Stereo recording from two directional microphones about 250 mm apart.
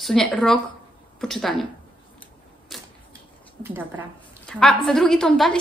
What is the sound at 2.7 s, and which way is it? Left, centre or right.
Typewriter, centre.